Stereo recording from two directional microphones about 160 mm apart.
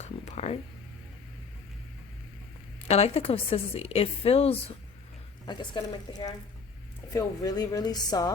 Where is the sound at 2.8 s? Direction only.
40° left (ahead or behind); by 8.3 s 25° left (ahead or behind).